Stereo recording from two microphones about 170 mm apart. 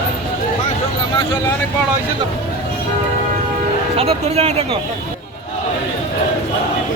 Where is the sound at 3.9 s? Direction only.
35° right (ahead or behind).